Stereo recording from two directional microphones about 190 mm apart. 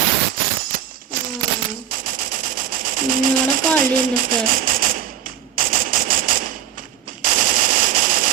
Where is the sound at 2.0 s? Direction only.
45° right (ahead or behind).